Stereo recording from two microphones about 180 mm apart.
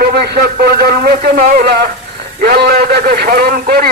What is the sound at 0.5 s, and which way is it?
A man's voice, 60° right (ahead or behind).